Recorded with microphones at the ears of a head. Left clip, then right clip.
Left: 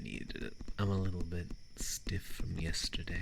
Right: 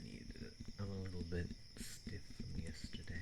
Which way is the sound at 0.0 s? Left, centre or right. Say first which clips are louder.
Left 11 dB; left.